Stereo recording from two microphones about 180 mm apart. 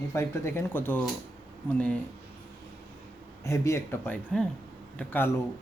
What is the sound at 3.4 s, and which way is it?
A man's voice, 15° left (ahead or behind).